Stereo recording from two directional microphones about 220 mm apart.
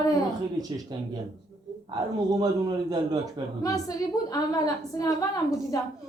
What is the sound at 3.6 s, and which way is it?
A woman's voice, 15° left (ahead or behind).